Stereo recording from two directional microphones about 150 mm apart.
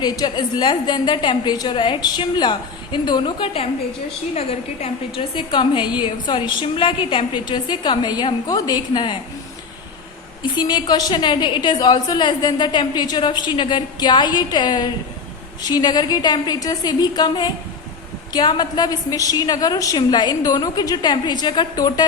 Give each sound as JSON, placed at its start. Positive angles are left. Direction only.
{"t": 0.0, "sound": "a woman's voice", "side_deg": 25}
{"t": 10.4, "sound": "a woman's voice", "side_deg": 30}